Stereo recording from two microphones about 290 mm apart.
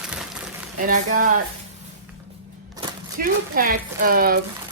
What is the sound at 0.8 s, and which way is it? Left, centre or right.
Speech, right.